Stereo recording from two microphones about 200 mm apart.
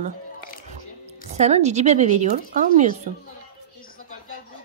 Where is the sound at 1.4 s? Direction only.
35° right (ahead or behind).